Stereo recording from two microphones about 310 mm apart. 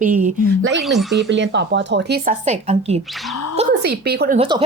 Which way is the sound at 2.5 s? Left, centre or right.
Right.